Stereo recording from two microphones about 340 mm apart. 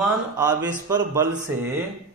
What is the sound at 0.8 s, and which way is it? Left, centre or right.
Speech, centre.